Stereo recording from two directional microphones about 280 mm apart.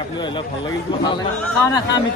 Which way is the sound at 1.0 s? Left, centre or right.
Centre.